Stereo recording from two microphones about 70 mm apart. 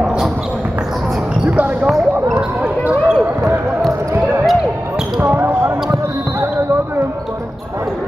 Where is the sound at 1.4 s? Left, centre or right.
Centre.